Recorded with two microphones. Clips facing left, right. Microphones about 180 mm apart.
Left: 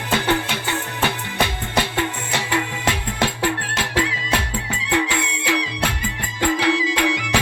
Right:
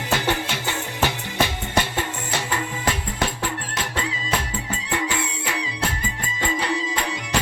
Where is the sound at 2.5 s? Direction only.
90° left.